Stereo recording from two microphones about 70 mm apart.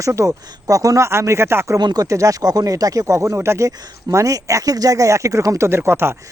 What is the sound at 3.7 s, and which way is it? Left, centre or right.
Speech, right.